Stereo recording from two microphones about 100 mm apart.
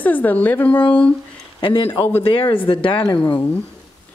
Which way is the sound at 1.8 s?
20° left (ahead or behind).